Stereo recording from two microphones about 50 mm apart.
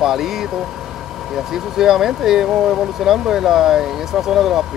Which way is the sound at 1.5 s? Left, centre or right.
Centre.